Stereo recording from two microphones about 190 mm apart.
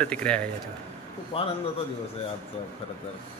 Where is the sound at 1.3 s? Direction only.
30° left (ahead or behind).